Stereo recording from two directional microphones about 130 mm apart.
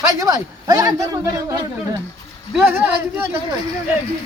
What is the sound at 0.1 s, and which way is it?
A man's voice, 25° right (ahead or behind).